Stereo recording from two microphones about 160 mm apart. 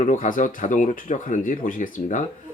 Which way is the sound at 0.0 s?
55° left (ahead or behind).